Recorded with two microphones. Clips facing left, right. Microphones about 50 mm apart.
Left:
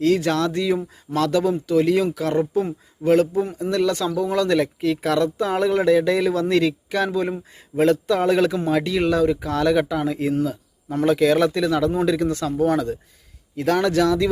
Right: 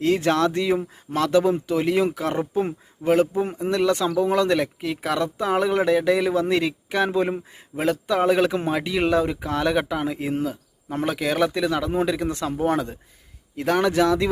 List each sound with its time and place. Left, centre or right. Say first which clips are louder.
0.0 s speech: left 1 dB; right
2.6 s speech: left 2 dB; right
7.8 s speech: left 3 dB; centre
11.9 s speech: left 3 dB; right